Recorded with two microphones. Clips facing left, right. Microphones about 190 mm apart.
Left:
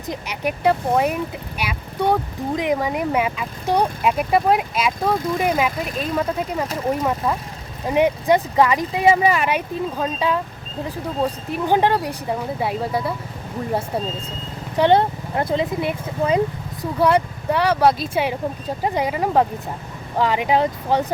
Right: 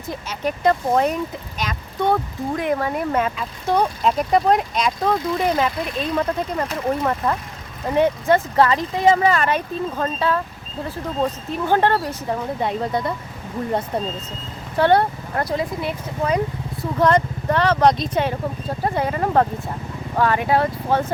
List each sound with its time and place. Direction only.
0.1 s speech: 15° left (ahead or behind)
14.8 s speech: 15° left (ahead or behind)
17.0 s speech: 10° left (ahead or behind)